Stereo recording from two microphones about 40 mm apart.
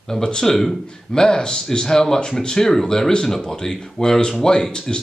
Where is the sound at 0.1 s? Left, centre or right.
Centre.